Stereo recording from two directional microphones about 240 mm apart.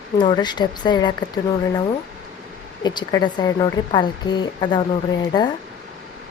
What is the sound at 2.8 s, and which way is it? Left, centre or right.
A woman's voice, centre.